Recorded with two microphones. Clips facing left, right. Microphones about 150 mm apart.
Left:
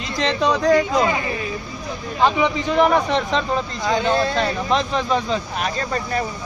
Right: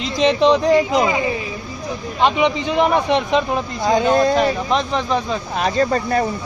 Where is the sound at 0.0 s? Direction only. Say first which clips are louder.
Right 6 dB; 20° right (ahead or behind).